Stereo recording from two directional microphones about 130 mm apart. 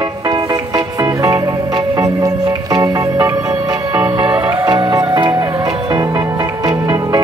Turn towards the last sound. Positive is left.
turn(degrees=-30)  # may be behind; listen again after turning